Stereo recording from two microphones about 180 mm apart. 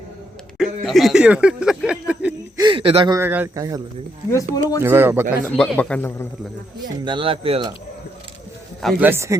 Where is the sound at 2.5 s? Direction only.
25° right (ahead or behind).